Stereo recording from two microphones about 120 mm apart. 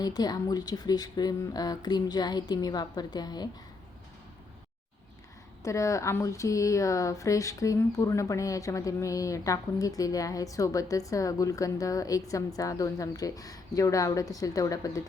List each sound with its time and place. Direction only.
0.0 s speech: 35° left (ahead or behind)
5.6 s speech: 25° left (ahead or behind)